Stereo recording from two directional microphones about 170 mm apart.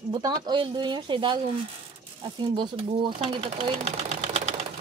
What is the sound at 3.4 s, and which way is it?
Sewing machine, 40° right (ahead or behind).